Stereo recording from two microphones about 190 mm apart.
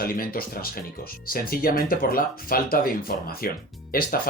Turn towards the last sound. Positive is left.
turn(degrees=50)  # may be behind; listen again after turning